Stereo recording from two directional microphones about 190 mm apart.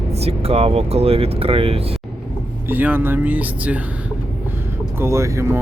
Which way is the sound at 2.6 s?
10° right (ahead or behind).